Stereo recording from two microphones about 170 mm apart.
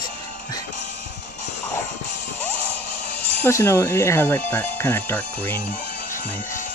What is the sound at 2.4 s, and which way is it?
Music, 10° left (ahead or behind).